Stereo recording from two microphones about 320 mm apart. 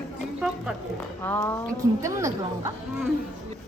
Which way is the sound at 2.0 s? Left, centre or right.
Centre.